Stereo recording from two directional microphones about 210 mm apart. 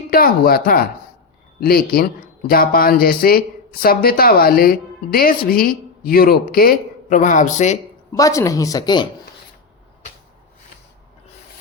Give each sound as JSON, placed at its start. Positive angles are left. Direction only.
{"t": 0.1, "sound": "a woman's voice", "side_deg": 45}
{"t": 8.1, "sound": "a woman's voice", "side_deg": 15}